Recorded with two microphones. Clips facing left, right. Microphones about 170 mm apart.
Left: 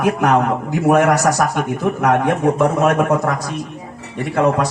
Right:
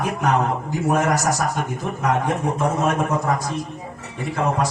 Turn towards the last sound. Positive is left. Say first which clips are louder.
# left 6 dB
turn(degrees=70)  # may be behind; listen again after turning